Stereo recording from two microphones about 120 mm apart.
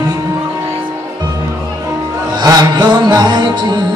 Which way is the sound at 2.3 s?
35° right (ahead or behind).